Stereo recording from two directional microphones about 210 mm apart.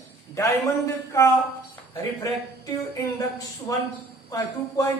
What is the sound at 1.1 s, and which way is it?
Speech, 10° left (ahead or behind).